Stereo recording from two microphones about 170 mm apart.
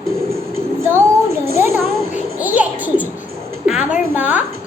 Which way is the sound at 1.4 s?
15° right (ahead or behind).